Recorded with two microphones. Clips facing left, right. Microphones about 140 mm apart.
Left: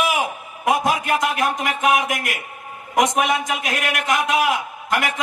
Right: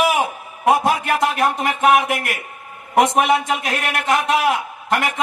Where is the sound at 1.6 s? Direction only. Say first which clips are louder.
Right 5 dB; 30° right (ahead or behind).